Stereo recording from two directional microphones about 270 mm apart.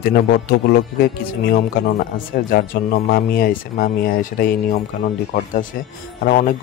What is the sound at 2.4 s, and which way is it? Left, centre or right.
Speech, left.